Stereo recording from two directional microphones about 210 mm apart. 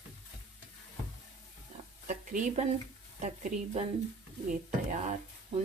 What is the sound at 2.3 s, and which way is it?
Speech, 35° right (ahead or behind).